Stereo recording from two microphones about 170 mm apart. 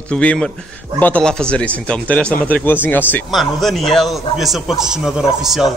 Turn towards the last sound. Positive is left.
turn(degrees=0)  # may be behind; listen again after turning